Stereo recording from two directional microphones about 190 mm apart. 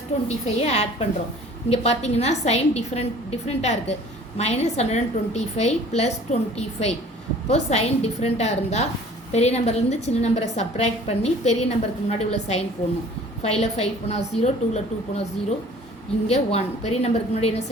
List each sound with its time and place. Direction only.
0.3 s a woman's voice: 35° left (ahead or behind)